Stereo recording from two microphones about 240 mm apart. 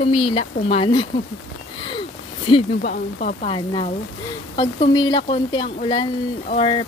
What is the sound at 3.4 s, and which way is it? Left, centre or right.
Speech, left.